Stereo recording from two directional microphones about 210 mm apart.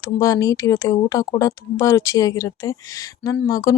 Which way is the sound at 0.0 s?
15° left (ahead or behind).